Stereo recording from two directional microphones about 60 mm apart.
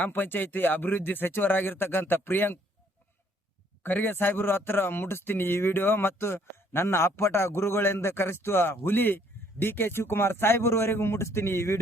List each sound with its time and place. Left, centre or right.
0.1 s speech: left
3.8 s speech: left